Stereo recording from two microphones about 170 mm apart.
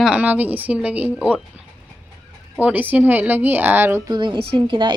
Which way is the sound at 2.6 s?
10° right (ahead or behind).